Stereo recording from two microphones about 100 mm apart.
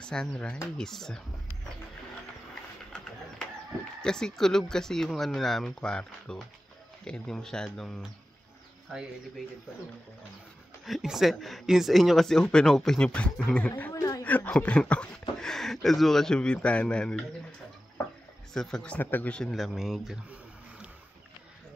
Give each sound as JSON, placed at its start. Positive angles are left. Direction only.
{"t": 0.0, "sound": "speech", "side_deg": 10}
{"t": 4.0, "sound": "speech", "side_deg": 5}
{"t": 10.9, "sound": "speech", "side_deg": -5}
{"t": 18.5, "sound": "speech", "side_deg": 5}
{"t": 18.9, "sound": "speech", "side_deg": 20}
{"t": 19.5, "sound": "speech", "side_deg": 0}